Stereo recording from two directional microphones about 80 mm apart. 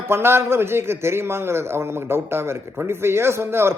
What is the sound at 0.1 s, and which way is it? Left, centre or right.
A man's voice, right.